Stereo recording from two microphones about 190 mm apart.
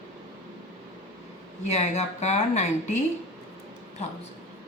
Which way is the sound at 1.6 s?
35° left (ahead or behind).